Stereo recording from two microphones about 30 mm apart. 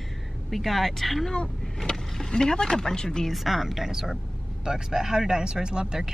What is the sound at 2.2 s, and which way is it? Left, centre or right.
Speech, left.